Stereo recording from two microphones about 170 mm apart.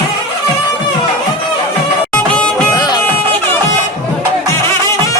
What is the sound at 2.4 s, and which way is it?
Music, 5° left (ahead or behind).